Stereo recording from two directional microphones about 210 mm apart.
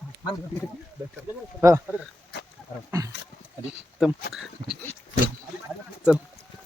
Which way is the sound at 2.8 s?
15° right (ahead or behind).